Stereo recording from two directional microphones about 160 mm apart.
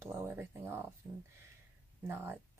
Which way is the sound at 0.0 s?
15° right (ahead or behind).